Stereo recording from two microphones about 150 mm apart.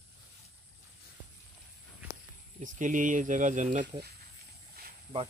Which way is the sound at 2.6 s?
60° right (ahead or behind).